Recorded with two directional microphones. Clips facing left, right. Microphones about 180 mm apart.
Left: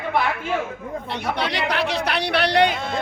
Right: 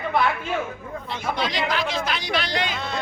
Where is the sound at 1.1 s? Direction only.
65° left (ahead or behind).